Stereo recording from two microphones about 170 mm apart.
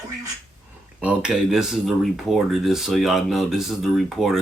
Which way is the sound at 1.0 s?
5° right (ahead or behind).